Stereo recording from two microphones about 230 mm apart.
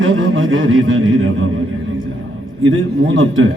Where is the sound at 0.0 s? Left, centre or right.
Right.